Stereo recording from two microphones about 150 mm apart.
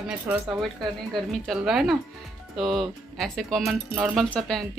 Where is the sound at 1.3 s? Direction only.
Centre (ahead or behind).